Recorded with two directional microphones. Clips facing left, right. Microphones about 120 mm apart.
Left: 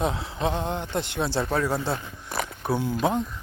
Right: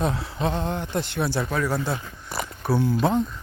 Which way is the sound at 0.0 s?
20° left (ahead or behind).